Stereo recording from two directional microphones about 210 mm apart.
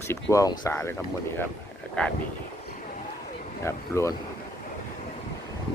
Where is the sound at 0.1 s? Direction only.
15° left (ahead or behind).